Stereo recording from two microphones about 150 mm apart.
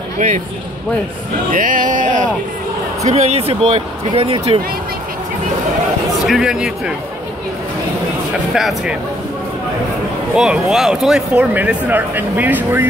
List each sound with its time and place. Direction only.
1.5 s speech: 65° right (ahead or behind)
3.0 s speech: 45° right (ahead or behind)
6.2 s speech: 5° right (ahead or behind)
8.5 s speech: centre (ahead or behind)
10.3 s speech: 5° right (ahead or behind)